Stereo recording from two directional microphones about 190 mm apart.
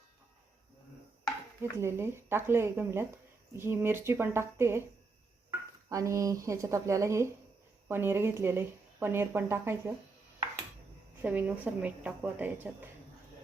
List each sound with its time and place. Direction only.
1.8 s speech: 15° right (ahead or behind)
11.2 s speech: 10° right (ahead or behind)